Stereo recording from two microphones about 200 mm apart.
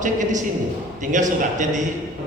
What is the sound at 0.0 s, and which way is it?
A man's voice, 40° right (ahead or behind).